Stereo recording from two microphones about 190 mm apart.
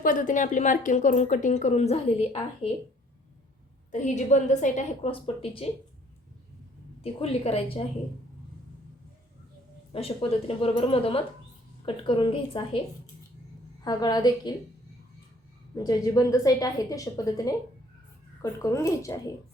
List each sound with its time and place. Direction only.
0.0 s a woman's voice: 45° left (ahead or behind)
3.9 s a woman's voice: 40° left (ahead or behind)
7.0 s a woman's voice: 30° left (ahead or behind)
9.9 s a woman's voice: 30° left (ahead or behind)
13.8 s a woman's voice: 20° left (ahead or behind)
15.7 s a woman's voice: 20° left (ahead or behind)
18.6 s a woman's voice: 15° left (ahead or behind)